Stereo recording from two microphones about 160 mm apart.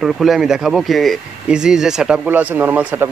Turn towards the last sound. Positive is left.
turn(degrees=-10)  # may be behind; listen again after turning